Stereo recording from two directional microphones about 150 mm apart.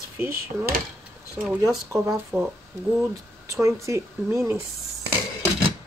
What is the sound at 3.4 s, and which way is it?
Speech, 20° right (ahead or behind).